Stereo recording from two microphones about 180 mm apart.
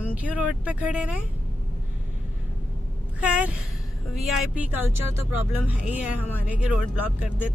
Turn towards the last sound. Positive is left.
turn(degrees=-5)  # may be behind; listen again after turning